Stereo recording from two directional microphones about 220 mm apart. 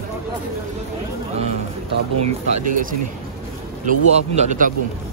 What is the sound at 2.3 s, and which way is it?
Speech, 35° right (ahead or behind).